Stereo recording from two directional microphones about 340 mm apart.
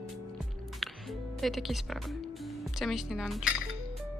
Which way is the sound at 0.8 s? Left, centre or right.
Centre.